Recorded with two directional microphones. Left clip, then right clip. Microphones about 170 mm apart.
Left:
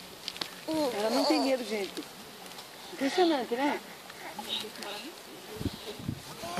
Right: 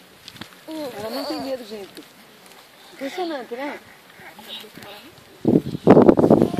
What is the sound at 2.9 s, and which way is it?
Speech, 35° right (ahead or behind).